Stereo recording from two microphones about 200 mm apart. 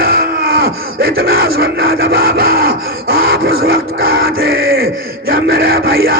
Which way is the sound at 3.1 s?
50° right (ahead or behind).